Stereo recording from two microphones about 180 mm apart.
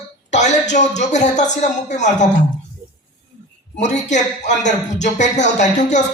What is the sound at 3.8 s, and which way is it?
Speech, 40° left (ahead or behind).